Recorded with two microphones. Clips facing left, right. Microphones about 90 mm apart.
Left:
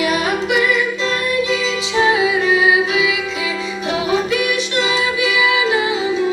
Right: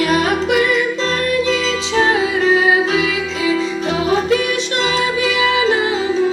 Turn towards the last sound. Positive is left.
turn(degrees=-35)  # may be behind; listen again after turning